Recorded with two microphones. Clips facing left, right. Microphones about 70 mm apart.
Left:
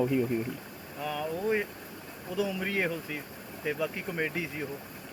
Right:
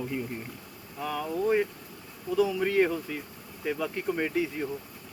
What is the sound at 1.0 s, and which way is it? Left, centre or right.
Speech, centre.